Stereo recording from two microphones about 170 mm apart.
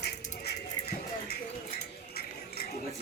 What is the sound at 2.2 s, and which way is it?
Music, 65° left (ahead or behind).